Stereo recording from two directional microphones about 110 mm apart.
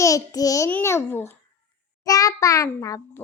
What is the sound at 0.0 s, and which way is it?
Speech, 30° left (ahead or behind).